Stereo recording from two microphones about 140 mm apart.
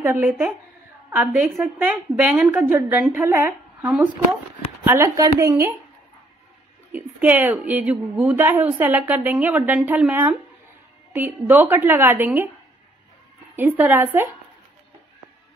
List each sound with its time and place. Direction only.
0.2 s speech: 5° right (ahead or behind)
2.3 s a woman's voice: 15° right (ahead or behind)
6.9 s a woman's voice: 10° right (ahead or behind)
13.6 s a woman's voice: 15° right (ahead or behind)